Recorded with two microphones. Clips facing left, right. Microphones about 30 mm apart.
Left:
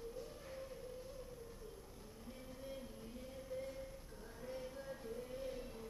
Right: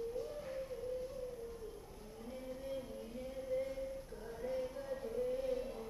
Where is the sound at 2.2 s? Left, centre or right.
Centre.